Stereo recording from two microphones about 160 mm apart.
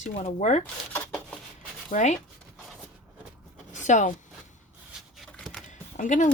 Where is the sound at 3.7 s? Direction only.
50° left (ahead or behind).